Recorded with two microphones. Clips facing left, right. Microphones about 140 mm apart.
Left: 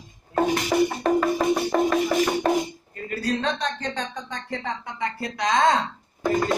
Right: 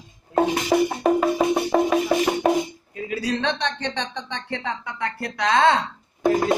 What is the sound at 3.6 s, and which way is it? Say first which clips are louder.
Speech: right 1 dB; 5° left (ahead or behind).